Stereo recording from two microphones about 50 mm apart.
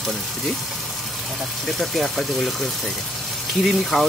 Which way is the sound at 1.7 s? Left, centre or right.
Centre.